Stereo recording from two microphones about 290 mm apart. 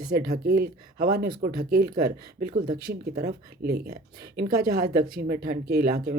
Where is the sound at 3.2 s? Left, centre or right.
Right.